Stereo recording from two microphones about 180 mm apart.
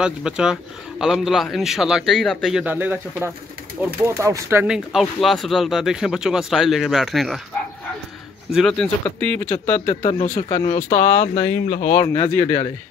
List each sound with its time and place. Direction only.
0.0 s speech: 5° right (ahead or behind)
8.5 s speech: centre (ahead or behind)
9.8 s speech: 40° left (ahead or behind)
10.3 s speech: 20° left (ahead or behind)
10.8 s speech: 45° left (ahead or behind)
12.0 s speech: 15° left (ahead or behind)